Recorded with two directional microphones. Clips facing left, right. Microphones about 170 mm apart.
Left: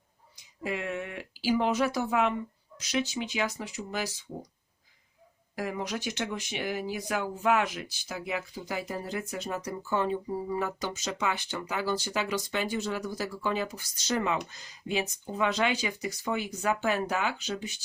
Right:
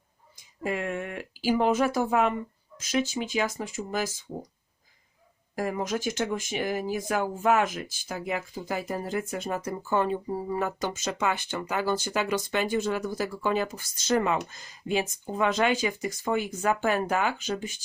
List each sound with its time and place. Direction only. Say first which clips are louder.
0.3 s speech: right 3 dB; 45° right (ahead or behind)
5.5 s speech: right 4 dB; 45° right (ahead or behind)